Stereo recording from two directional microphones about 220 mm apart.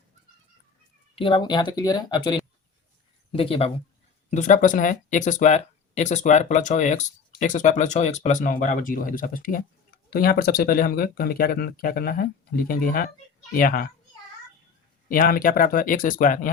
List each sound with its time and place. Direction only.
1.1 s speech: 25° left (ahead or behind); by 13.9 s 40° left (ahead or behind)
15.1 s speech: 40° left (ahead or behind)